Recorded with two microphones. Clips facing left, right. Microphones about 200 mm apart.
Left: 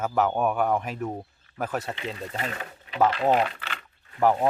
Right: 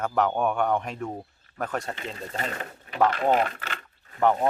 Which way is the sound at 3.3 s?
45° right (ahead or behind).